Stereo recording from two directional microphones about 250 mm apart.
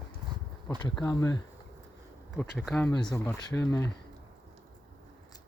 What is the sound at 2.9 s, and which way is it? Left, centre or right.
Speech, centre.